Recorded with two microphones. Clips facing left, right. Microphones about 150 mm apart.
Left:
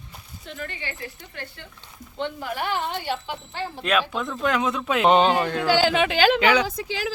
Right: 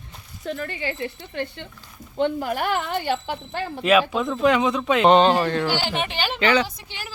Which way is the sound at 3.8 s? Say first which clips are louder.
Right 6 dB; 5° right (ahead or behind).